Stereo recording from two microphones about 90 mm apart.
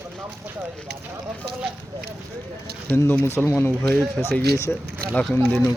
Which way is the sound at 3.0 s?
25° left (ahead or behind).